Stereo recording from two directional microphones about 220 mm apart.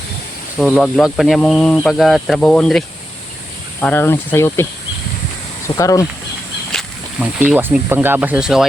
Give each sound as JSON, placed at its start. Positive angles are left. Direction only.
{"t": 0.6, "sound": "speech", "side_deg": 0}
{"t": 5.6, "sound": "speech", "side_deg": 15}
{"t": 7.4, "sound": "speech", "side_deg": -5}